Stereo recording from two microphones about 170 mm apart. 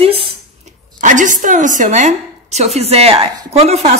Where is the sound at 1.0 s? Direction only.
50° right (ahead or behind).